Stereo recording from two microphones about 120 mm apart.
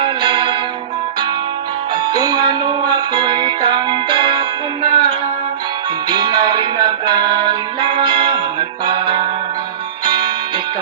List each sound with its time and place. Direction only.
0.0 s music: 40° right (ahead or behind)
2.1 s music: 35° right (ahead or behind)